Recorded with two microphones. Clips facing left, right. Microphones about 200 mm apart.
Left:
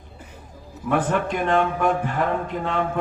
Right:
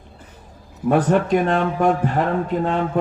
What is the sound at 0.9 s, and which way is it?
Speech, 40° right (ahead or behind).